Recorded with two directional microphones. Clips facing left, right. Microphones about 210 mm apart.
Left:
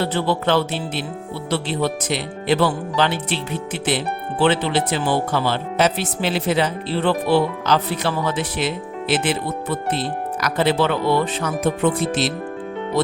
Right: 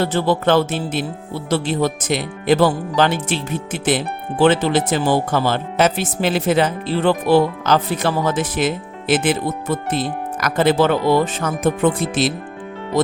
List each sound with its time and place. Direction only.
0.0 s speech: 45° right (ahead or behind)